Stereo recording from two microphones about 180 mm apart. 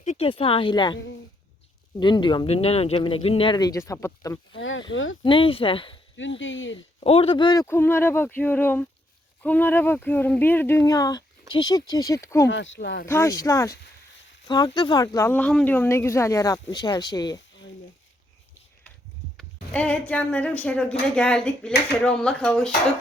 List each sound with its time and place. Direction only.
0.0 s speech: 35° left (ahead or behind)
2.0 s speech: 25° left (ahead or behind)
4.5 s speech: 90° left
5.2 s speech: 30° left (ahead or behind)
6.4 s speech: 90° left
7.0 s speech: 30° left (ahead or behind); by 12.5 s 15° left (ahead or behind)
12.5 s speech: 90° left; by 13.1 s 70° left (ahead or behind)
13.1 s speech: 15° left (ahead or behind)
19.4 s speech: 5° left (ahead or behind)